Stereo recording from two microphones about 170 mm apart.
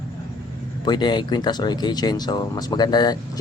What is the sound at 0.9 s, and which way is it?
Speech, 25° left (ahead or behind).